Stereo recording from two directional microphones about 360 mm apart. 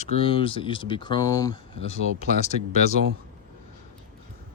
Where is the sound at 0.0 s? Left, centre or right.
Centre.